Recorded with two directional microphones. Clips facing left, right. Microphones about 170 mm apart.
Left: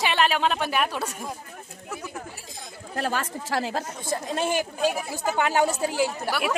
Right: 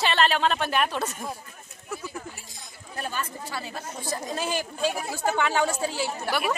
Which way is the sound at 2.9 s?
85° left.